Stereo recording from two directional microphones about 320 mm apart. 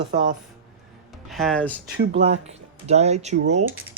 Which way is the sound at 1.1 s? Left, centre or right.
Centre.